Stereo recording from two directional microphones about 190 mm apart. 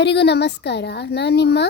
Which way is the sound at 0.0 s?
60° left (ahead or behind).